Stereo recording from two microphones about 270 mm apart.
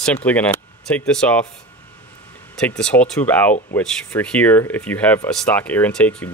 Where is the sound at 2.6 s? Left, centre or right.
Centre.